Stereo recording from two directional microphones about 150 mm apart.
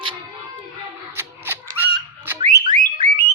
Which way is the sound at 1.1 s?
15° right (ahead or behind).